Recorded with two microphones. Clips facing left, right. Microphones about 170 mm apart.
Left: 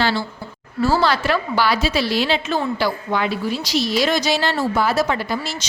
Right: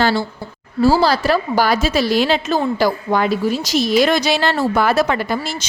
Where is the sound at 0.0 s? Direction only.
45° right (ahead or behind).